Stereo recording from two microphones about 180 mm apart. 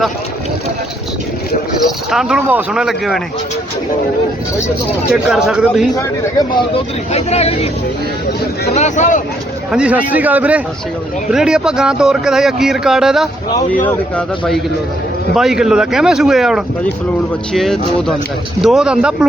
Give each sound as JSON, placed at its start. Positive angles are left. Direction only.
{"t": 2.0, "sound": "speech", "side_deg": -5}
{"t": 5.1, "sound": "speech", "side_deg": -5}
{"t": 6.7, "sound": "speech", "side_deg": 35}
{"t": 8.7, "sound": "speech", "side_deg": 40}
{"t": 9.7, "sound": "a man's voice", "side_deg": -5}